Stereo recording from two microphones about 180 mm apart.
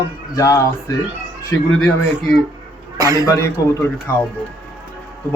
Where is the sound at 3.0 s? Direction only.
20° right (ahead or behind).